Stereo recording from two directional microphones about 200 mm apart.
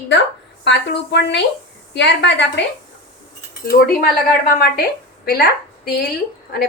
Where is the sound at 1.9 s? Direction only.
60° left (ahead or behind).